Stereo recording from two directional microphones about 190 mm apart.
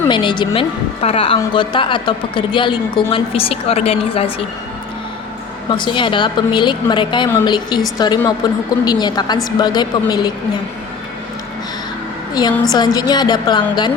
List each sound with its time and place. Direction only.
0.1 s a woman's voice: 25° left (ahead or behind)
5.7 s a woman's voice: 25° left (ahead or behind)
12.3 s a woman's voice: 20° left (ahead or behind)